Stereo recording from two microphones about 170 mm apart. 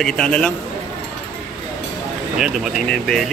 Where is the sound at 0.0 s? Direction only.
5° left (ahead or behind).